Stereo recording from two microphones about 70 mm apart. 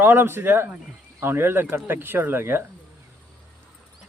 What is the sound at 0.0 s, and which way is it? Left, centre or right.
Speech, right.